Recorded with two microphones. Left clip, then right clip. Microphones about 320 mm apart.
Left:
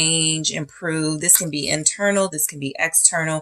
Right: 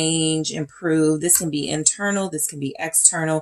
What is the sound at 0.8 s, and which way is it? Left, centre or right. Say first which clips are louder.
Speech: right 5 dB; left.